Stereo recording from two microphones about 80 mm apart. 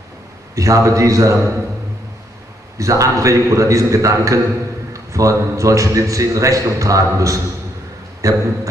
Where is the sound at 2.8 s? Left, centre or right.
Right.